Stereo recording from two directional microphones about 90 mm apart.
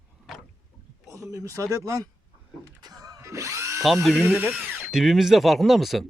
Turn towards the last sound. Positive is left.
turn(degrees=0)  # may be behind; listen again after turning